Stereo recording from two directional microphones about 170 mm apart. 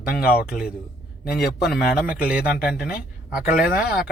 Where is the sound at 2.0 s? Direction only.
10° right (ahead or behind).